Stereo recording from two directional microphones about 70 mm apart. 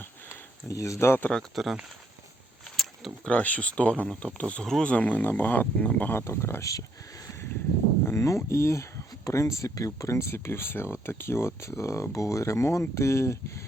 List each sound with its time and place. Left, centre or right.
0.7 s speech: left
1.3 s speech: centre
2.6 s a sound: centre
3.2 s speech: centre
4.6 s speech: centre
4.9 s speech: left
6.1 s speech: left
6.7 s speech: left